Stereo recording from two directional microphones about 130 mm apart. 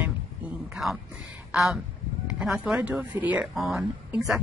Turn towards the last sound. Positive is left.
turn(degrees=0)  # may be behind; listen again after turning